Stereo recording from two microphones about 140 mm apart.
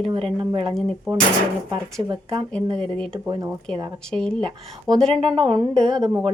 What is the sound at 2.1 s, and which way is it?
Speech, 35° right (ahead or behind).